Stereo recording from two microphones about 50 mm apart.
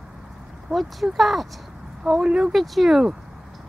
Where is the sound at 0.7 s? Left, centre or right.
Centre.